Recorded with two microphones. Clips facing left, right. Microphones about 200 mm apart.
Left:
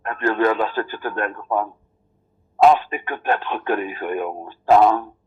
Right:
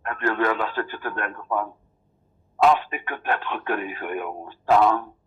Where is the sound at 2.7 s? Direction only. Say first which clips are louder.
Left 4 dB; 30° left (ahead or behind).